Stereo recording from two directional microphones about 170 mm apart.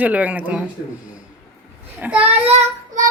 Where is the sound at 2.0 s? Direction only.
10° right (ahead or behind).